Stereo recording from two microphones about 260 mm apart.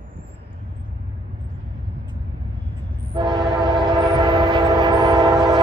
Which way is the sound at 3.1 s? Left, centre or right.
Centre.